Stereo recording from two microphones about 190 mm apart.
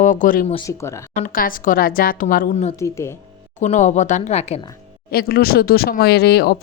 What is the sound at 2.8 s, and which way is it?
Speech, 15° left (ahead or behind).